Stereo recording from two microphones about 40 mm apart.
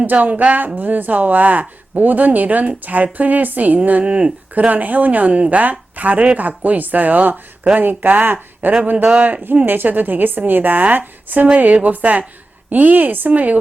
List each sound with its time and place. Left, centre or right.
0.0 s a woman's voice: right
13.3 s a woman's voice: right